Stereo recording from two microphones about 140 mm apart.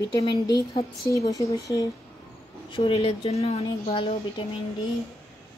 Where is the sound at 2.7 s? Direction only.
40° left (ahead or behind).